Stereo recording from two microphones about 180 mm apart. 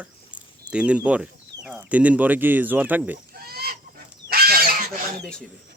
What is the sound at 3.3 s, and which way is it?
Goose, 60° right (ahead or behind).